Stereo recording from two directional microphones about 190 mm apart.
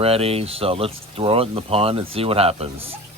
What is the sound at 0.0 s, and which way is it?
Speech, 30° right (ahead or behind).